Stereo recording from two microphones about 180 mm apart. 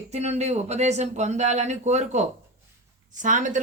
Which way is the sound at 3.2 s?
45° right (ahead or behind).